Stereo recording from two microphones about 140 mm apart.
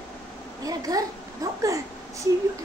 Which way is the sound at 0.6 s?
25° right (ahead or behind).